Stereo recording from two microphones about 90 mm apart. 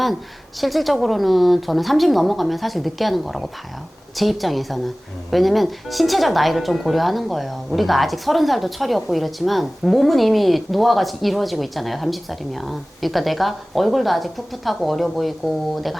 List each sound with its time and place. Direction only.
0.6 s speech: centre (ahead or behind)